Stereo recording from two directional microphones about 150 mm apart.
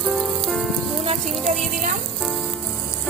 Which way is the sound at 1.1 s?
50° right (ahead or behind).